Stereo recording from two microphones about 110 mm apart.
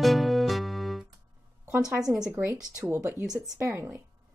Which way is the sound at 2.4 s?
15° right (ahead or behind).